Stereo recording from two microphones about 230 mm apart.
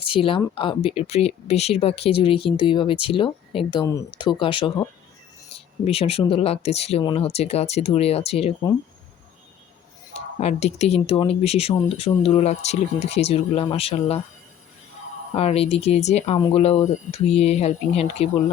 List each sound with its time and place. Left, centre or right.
0.0 s speech: left
10.4 s speech: left
15.4 s speech: left